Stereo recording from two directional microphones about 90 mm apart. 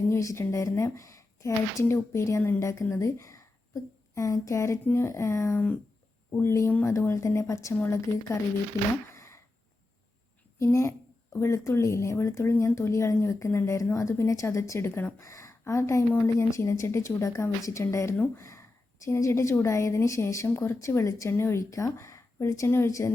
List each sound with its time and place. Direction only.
0.1 s speech: 35° left (ahead or behind)
6.7 s speech: 20° left (ahead or behind)
6.9 s speech: 35° left (ahead or behind)
9.1 s a sound: 30° left (ahead or behind)
10.6 s speech: 35° left (ahead or behind)